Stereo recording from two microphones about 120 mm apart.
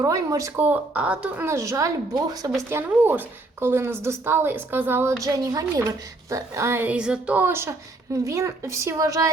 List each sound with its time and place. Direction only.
0.0 s speech: 30° right (ahead or behind); by 1.5 s 10° right (ahead or behind)
1.5 s speech: 25° right (ahead or behind)
2.6 s speech: 20° right (ahead or behind)
5.2 s speech: 30° right (ahead or behind)